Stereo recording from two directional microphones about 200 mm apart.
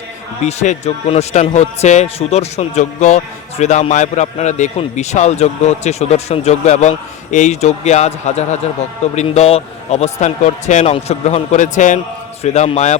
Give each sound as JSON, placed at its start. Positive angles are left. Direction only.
{"t": 0.4, "sound": "a man's voice", "side_deg": 35}